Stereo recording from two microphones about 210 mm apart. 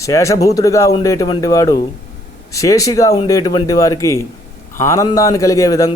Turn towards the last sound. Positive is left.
turn(degrees=15)  # may be behind; listen again after turning